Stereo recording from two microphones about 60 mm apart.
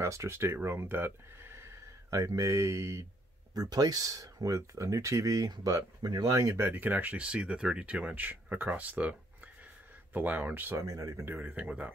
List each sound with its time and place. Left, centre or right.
0.0 s speech: right
2.0 s speech: right
3.5 s speech: right
6.5 s speech: right
6.8 s speech: right
10.1 s speech: right
10.7 s speech: right
11.3 s speech: right